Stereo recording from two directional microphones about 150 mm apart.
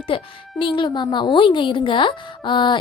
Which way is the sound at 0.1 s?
35° left (ahead or behind).